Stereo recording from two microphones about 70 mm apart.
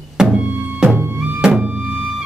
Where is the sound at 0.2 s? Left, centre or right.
Centre.